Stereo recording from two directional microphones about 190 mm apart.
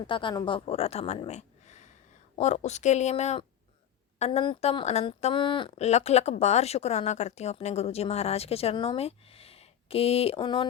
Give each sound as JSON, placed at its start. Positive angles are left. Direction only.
{"t": 0.1, "sound": "a woman's voice", "side_deg": 25}